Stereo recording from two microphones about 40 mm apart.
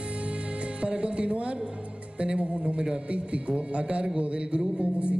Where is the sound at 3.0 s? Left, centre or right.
Right.